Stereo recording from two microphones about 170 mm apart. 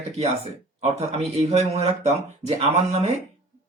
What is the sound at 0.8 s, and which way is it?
Speech, 40° right (ahead or behind).